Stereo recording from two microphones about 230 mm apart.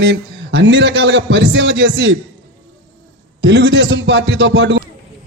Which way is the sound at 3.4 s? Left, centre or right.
Right.